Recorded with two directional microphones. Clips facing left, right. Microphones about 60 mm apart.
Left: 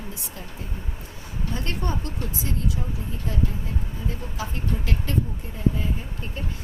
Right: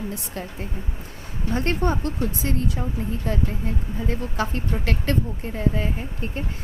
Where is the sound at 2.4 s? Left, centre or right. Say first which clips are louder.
Right 4 dB; right.